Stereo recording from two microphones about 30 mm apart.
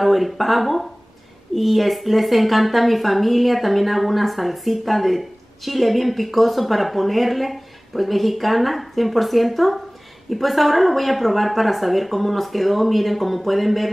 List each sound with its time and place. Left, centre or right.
0.0 s speech: centre